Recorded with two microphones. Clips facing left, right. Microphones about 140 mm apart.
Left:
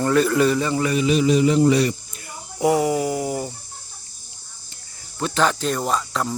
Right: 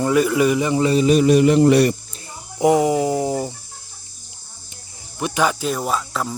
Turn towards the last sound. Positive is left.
turn(degrees=0)  # may be behind; listen again after turning